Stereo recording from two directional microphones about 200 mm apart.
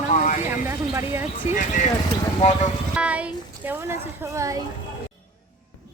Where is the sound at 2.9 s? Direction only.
5° right (ahead or behind).